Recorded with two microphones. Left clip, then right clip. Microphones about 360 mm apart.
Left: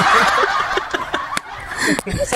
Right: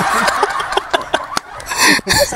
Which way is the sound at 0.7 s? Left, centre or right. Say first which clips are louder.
Right 4 dB; centre.